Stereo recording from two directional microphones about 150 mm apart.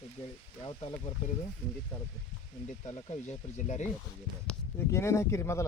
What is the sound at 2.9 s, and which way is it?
Speech, 45° left (ahead or behind).